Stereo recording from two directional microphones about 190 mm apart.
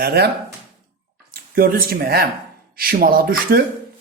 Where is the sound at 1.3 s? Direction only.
50° right (ahead or behind).